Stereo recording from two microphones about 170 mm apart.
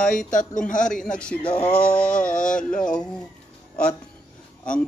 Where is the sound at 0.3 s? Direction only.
50° left (ahead or behind).